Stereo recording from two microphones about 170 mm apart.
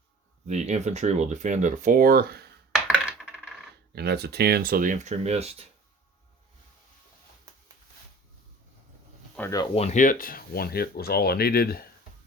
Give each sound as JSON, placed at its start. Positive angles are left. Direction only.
{"t": 0.4, "sound": "speech", "side_deg": -40}
{"t": 2.8, "sound": "coin", "side_deg": -5}
{"t": 3.9, "sound": "speech", "side_deg": -75}
{"t": 9.4, "sound": "speech", "side_deg": 10}
{"t": 9.7, "sound": "speech", "side_deg": 40}